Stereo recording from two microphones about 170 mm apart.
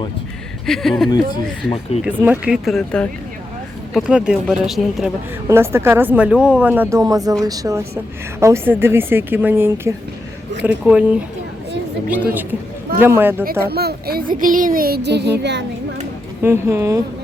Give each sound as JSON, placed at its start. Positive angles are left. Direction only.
{"t": 0.6, "sound": "speech", "side_deg": 0}
{"t": 2.2, "sound": "speech", "side_deg": -10}
{"t": 5.5, "sound": "speech", "side_deg": -15}
{"t": 13.4, "sound": "a woman's voice", "side_deg": -65}
{"t": 16.4, "sound": "speech", "side_deg": -15}